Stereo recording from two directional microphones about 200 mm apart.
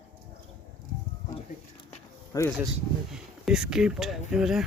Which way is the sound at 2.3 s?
20° left (ahead or behind).